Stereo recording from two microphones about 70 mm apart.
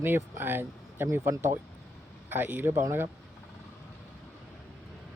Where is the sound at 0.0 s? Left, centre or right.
Right.